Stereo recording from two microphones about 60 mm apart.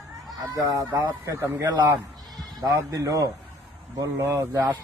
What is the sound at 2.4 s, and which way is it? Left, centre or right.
Speech, right.